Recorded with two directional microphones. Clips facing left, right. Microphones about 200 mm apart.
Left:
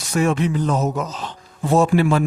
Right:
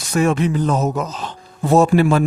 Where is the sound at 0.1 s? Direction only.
45° right (ahead or behind).